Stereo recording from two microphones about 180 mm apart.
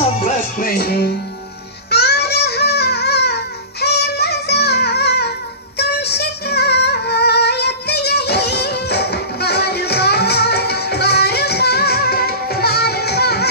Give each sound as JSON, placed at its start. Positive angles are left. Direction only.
{"t": 0.2, "sound": "music", "side_deg": 50}